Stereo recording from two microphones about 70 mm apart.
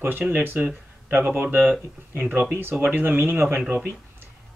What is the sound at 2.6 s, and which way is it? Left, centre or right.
Speech, right.